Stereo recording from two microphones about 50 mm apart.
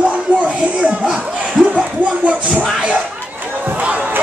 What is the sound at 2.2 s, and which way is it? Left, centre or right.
Music, right.